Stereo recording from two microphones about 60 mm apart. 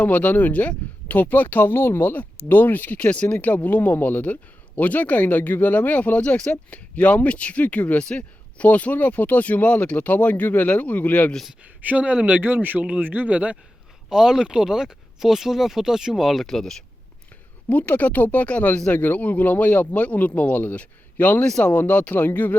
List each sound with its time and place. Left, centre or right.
0.0 s speech: left
11.6 s speech: right
13.0 s speech: right
14.1 s speech: centre
17.7 s speech: left